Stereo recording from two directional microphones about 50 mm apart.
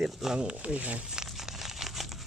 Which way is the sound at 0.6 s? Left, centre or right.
Right.